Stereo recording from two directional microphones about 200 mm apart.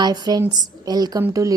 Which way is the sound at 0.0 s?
20° right (ahead or behind).